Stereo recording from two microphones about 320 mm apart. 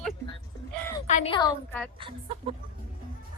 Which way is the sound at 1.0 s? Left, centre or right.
Centre.